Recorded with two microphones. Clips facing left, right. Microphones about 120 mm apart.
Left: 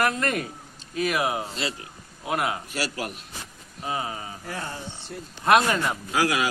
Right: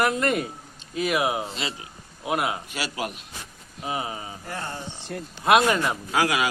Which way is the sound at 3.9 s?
20° right (ahead or behind).